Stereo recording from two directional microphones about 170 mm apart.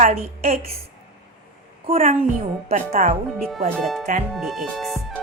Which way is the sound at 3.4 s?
Centre (ahead or behind).